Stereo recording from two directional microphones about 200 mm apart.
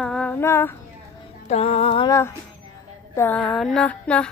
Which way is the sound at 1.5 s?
30° left (ahead or behind).